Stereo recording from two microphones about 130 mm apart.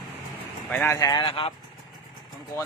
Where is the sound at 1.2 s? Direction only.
45° left (ahead or behind).